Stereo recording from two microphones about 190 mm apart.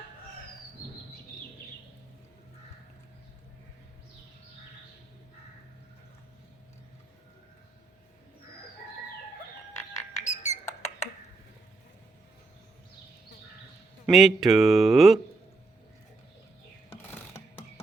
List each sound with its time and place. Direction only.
10.2 s music: 40° left (ahead or behind)
14.1 s speech: centre (ahead or behind)